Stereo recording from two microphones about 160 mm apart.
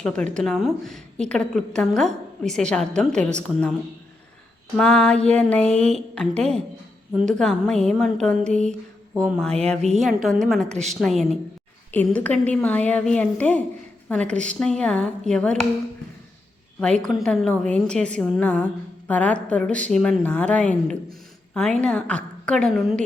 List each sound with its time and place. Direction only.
0.0 s a woman's voice: 5° left (ahead or behind)
4.8 s a woman's voice: 5° left (ahead or behind)
10.7 s a woman's voice: 45° right (ahead or behind)
11.0 s a woman's voice: centre (ahead or behind)
16.8 s a woman's voice: 5° left (ahead or behind)